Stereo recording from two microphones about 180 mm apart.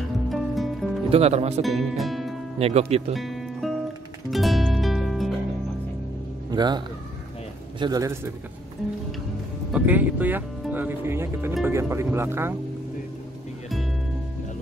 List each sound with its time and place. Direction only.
0.3 s music: centre (ahead or behind)
1.1 s speech: 35° right (ahead or behind)
1.6 s speech: centre (ahead or behind)
2.6 s speech: 35° right (ahead or behind)
3.2 s music: centre (ahead or behind)
6.5 s speech: 25° right (ahead or behind)
7.8 s a man's voice: 20° right (ahead or behind)
9.7 s speech: 10° right (ahead or behind)